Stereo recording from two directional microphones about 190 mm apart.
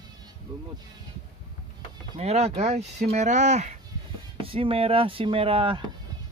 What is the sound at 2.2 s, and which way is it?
Speech, 35° right (ahead or behind).